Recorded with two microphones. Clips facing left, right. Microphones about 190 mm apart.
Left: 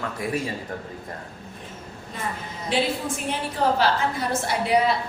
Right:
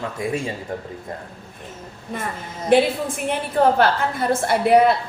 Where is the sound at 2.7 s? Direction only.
55° right (ahead or behind).